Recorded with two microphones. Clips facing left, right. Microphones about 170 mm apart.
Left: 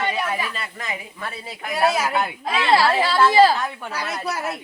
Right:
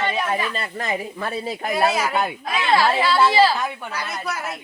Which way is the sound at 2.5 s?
35° left (ahead or behind).